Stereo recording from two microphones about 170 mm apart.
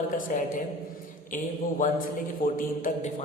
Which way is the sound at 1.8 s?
55° left (ahead or behind).